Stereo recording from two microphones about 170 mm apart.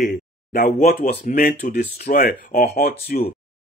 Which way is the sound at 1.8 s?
45° left (ahead or behind).